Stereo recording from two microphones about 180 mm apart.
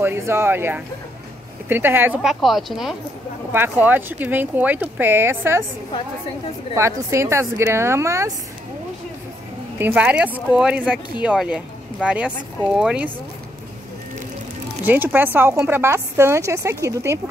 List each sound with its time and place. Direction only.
0.0 s speech: 15° right (ahead or behind)
2.4 s speech: centre (ahead or behind)
6.7 s speech: 15° right (ahead or behind)
9.8 s speech: 10° right (ahead or behind)
14.9 s speech: 10° right (ahead or behind)